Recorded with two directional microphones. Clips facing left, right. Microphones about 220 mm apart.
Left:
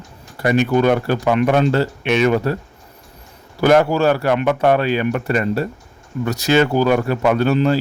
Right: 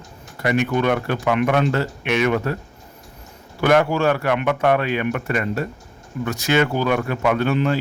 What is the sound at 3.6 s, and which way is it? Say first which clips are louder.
Speech: left 3 dB; 35° left (ahead or behind).